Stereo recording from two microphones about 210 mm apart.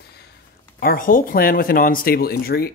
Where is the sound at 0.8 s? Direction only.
45° left (ahead or behind).